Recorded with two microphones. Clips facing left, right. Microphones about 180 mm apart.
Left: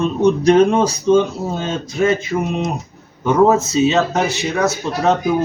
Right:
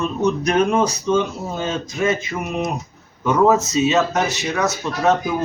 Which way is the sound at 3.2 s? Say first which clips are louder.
Left 2 dB; 30° left (ahead or behind).